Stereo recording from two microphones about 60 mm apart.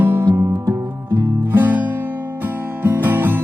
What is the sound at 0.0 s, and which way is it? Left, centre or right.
Music, right.